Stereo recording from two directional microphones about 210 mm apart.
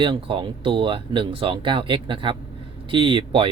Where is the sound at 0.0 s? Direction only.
25° right (ahead or behind).